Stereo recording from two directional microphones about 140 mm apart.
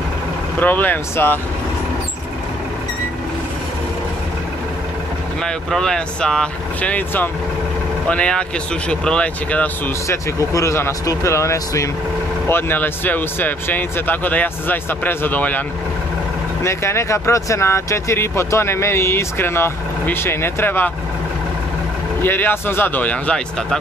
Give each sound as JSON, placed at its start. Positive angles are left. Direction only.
{"t": 0.6, "sound": "speech", "side_deg": 15}
{"t": 5.4, "sound": "speech", "side_deg": 5}
{"t": 10.0, "sound": "speech", "side_deg": 20}
{"t": 16.6, "sound": "speech", "side_deg": 20}
{"t": 22.2, "sound": "speech", "side_deg": 15}